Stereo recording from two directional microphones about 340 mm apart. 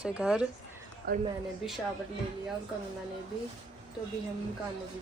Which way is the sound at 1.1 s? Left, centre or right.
Right.